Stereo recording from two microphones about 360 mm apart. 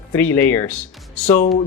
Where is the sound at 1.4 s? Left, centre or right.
Left.